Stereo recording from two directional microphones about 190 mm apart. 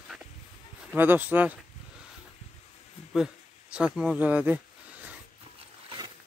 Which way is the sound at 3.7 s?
5° right (ahead or behind).